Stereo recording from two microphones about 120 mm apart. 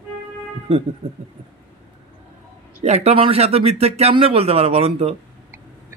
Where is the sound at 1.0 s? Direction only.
60° right (ahead or behind).